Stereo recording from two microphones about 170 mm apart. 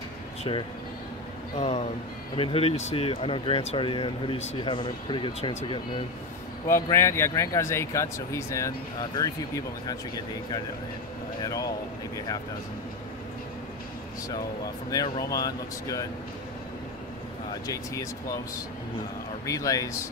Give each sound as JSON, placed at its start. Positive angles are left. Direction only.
{"t": 0.4, "sound": "speech", "side_deg": 30}
{"t": 6.7, "sound": "speech", "side_deg": 15}
{"t": 11.4, "sound": "speech", "side_deg": 20}
{"t": 14.9, "sound": "speech", "side_deg": 25}
{"t": 17.6, "sound": "speech", "side_deg": 20}
{"t": 19.4, "sound": "speech", "side_deg": 20}